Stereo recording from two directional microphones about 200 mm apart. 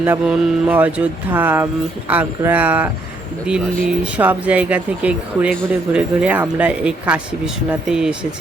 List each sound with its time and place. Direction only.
0.0 s speech: 10° right (ahead or behind)
4.0 s speech: 10° right (ahead or behind)